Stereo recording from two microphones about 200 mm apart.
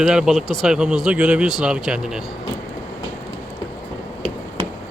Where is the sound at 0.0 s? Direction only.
5° right (ahead or behind).